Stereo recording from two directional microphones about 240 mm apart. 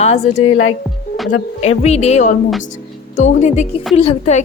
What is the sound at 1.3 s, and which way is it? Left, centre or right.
A woman's voice, left.